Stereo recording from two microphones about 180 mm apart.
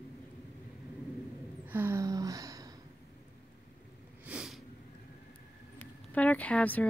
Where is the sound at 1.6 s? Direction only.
10° right (ahead or behind).